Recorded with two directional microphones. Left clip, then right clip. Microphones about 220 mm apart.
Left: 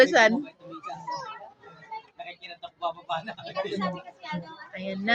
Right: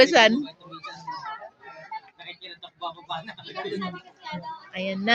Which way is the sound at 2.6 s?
40° left (ahead or behind).